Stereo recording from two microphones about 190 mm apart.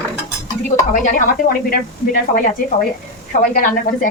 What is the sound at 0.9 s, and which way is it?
Speech, 45° left (ahead or behind).